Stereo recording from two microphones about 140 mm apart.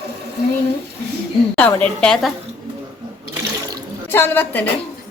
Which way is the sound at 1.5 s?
15° left (ahead or behind).